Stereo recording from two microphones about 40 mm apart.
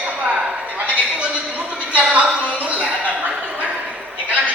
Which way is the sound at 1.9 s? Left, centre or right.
Right.